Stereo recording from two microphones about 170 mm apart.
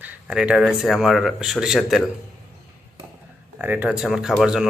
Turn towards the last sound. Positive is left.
turn(degrees=-5)  # may be behind; listen again after turning